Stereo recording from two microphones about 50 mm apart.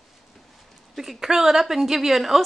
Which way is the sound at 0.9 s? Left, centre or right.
Centre.